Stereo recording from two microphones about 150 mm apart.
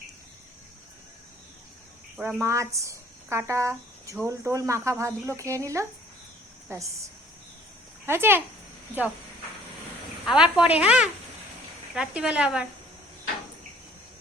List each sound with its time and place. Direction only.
2.1 s speech: 15° right (ahead or behind)
8.0 s speech: 15° right (ahead or behind)
10.2 s speech: 5° right (ahead or behind)